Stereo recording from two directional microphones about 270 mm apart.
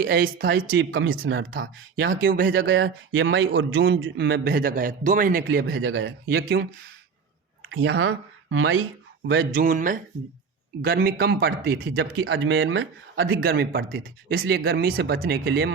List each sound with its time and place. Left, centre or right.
0.0 s speech: right
0.8 s speech: right
2.1 s speech: right
7.6 s speech: right
9.6 s speech: right
13.4 s speech: right